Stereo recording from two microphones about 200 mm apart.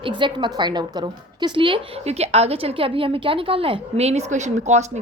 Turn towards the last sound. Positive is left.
turn(degrees=-35)  # may be behind; listen again after turning